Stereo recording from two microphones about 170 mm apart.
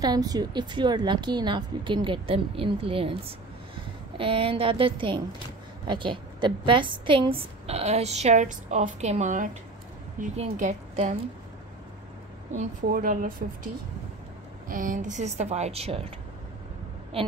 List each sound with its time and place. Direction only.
0.0 s a woman's voice: 25° right (ahead or behind); by 11.1 s 45° right (ahead or behind)
12.5 s a woman's voice: 55° right (ahead or behind)
14.7 s a woman's voice: 50° right (ahead or behind); by 16.1 s 35° right (ahead or behind)